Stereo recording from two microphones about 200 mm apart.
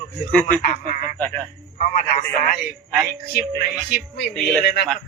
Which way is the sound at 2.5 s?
45° left (ahead or behind).